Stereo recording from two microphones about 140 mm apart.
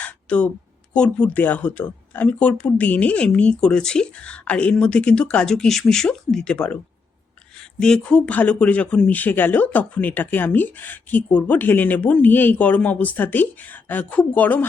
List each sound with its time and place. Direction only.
0.0 s a sound: 10° left (ahead or behind)
0.9 s speech: 5° left (ahead or behind)
7.8 s speech: 5° left (ahead or behind)